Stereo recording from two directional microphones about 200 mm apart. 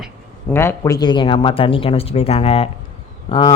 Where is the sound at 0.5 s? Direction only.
15° left (ahead or behind).